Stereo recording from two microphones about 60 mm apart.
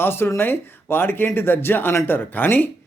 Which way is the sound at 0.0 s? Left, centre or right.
Left.